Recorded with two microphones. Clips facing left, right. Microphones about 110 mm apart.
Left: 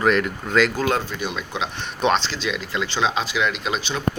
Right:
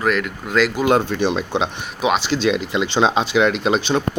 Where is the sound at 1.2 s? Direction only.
30° right (ahead or behind).